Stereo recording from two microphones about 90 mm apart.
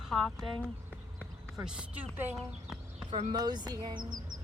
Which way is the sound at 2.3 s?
5° right (ahead or behind).